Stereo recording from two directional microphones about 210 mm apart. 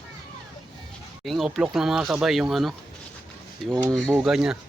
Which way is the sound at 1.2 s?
Centre (ahead or behind).